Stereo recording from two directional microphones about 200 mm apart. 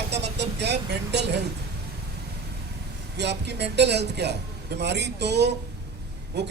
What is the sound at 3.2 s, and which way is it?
Speech, 60° right (ahead or behind).